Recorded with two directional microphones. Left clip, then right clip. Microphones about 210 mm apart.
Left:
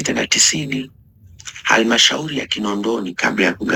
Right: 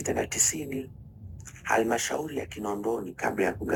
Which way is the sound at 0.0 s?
5° left (ahead or behind).